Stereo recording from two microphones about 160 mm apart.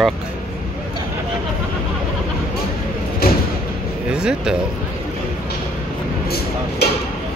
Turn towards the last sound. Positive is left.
turn(degrees=85)